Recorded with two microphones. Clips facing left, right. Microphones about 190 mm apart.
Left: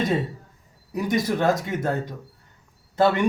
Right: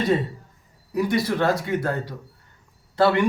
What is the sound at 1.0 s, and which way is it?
A man's voice, 20° left (ahead or behind).